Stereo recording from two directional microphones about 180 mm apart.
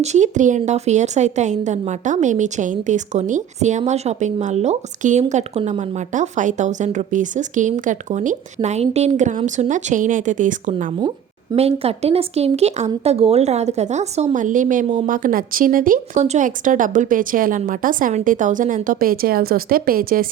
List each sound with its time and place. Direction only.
0.0 s a woman's voice: 40° right (ahead or behind)
11.5 s a woman's voice: 35° right (ahead or behind); by 20.2 s 55° right (ahead or behind)